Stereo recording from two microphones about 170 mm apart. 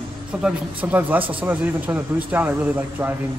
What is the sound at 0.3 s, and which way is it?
Speech, 5° right (ahead or behind).